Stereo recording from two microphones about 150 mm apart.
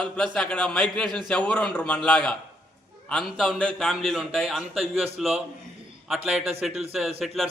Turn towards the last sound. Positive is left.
turn(degrees=0)  # may be behind; listen again after turning